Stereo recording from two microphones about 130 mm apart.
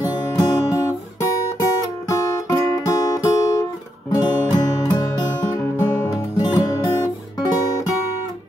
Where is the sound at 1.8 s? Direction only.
25° left (ahead or behind).